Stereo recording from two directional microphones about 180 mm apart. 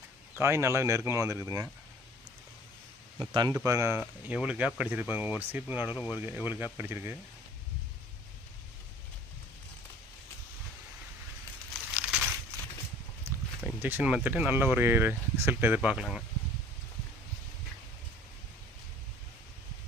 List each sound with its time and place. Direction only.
0.3 s speech: 15° right (ahead or behind)
3.2 s speech: 25° right (ahead or behind)
11.9 s a sound: 5° right (ahead or behind)
13.6 s speech: 10° right (ahead or behind)